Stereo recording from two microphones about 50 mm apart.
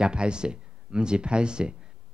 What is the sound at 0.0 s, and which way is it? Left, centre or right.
Speech, centre.